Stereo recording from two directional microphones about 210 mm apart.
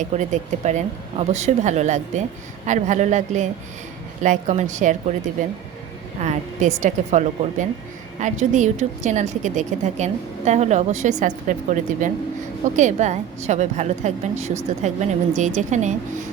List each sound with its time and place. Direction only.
0.0 s a woman's voice: 35° right (ahead or behind)